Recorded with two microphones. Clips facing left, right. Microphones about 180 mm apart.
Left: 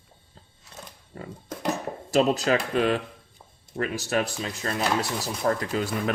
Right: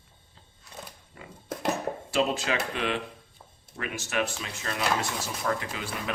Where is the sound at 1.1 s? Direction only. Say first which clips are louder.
Left 9 dB; 40° left (ahead or behind).